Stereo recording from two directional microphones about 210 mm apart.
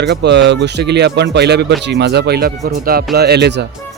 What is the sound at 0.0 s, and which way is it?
Speech, 55° right (ahead or behind).